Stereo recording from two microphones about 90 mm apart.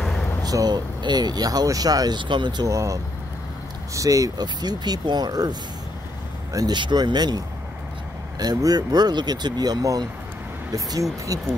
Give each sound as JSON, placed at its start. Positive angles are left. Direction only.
{"t": 0.0, "sound": "vehicle", "side_deg": 5}
{"t": 0.4, "sound": "speech", "side_deg": -45}
{"t": 2.7, "sound": "speech", "side_deg": -35}
{"t": 6.8, "sound": "speech", "side_deg": -55}